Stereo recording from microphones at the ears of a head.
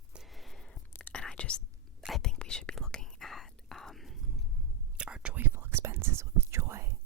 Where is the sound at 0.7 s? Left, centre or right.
Left.